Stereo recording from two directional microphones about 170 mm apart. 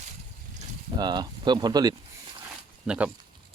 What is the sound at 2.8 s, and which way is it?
Speech, 5° right (ahead or behind).